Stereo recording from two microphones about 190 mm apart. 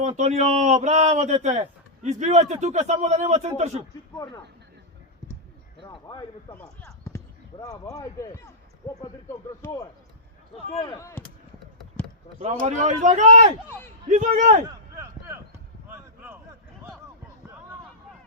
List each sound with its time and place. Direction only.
0.2 s a man's voice: 35° right (ahead or behind)
5.8 s speech: 25° left (ahead or behind)
6.5 s speech: 10° left (ahead or behind)
9.6 s speech: 10° left (ahead or behind)
10.7 s speech: 30° left (ahead or behind)
10.9 s speech: 15° left (ahead or behind)
11.8 s a sound: centre (ahead or behind)
12.4 s a man's voice: 35° right (ahead or behind)
13.7 s speech: 10° left (ahead or behind)
14.1 s a man's voice: 45° right (ahead or behind)
14.9 s a sound: 15° right (ahead or behind)